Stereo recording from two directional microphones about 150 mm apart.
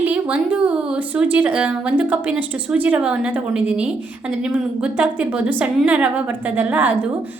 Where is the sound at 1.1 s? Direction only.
10° right (ahead or behind).